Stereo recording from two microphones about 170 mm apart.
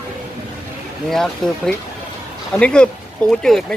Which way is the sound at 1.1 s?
5° left (ahead or behind).